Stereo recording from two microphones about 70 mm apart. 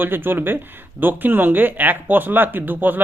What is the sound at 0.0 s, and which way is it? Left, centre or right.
Speech, right.